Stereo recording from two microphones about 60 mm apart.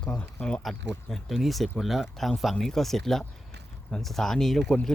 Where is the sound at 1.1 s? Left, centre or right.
Centre.